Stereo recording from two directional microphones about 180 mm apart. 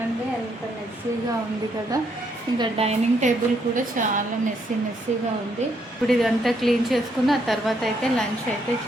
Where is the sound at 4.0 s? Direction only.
45° right (ahead or behind).